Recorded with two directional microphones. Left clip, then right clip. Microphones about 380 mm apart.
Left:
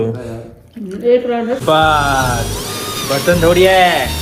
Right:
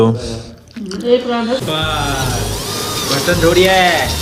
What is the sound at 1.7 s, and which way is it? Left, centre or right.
Speech, centre.